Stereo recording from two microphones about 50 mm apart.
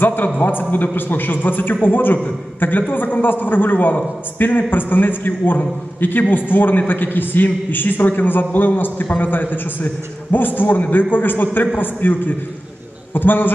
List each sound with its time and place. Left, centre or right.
0.0 s a man's voice: left